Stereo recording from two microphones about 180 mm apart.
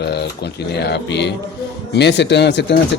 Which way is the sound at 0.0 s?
65° left (ahead or behind).